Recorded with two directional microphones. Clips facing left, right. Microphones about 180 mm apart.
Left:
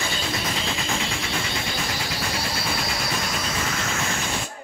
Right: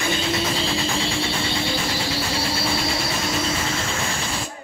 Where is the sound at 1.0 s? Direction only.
30° right (ahead or behind).